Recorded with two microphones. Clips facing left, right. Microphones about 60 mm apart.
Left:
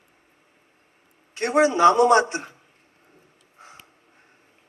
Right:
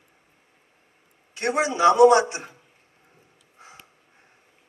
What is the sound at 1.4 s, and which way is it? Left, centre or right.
A man's voice, left.